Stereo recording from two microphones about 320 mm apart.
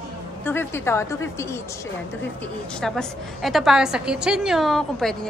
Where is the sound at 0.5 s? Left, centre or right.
Centre.